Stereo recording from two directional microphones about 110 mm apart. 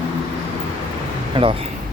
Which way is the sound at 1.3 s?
60° right (ahead or behind).